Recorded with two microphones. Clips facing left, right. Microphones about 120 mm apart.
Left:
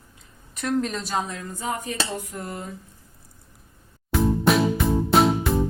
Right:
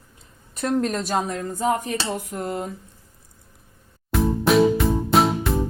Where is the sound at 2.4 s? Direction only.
65° right (ahead or behind).